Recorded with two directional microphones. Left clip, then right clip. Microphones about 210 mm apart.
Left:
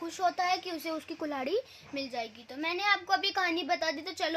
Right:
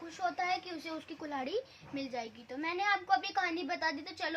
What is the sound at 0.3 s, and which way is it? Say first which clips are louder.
A woman's voice: left 4 dB; 50° left (ahead or behind).